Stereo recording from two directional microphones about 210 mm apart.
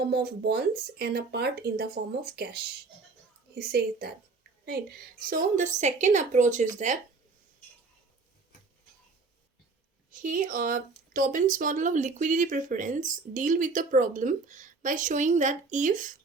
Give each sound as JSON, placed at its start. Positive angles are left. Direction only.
{"t": 0.1, "sound": "speech", "side_deg": -50}
{"t": 5.2, "sound": "speech", "side_deg": -40}
{"t": 10.1, "sound": "speech", "side_deg": -40}